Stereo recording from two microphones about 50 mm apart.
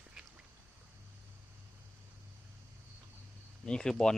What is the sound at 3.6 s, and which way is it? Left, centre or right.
Speech, centre.